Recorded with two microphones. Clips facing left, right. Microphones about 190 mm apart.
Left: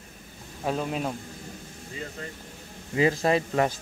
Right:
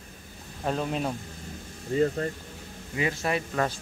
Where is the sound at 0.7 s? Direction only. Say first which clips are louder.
Even; 5° left (ahead or behind).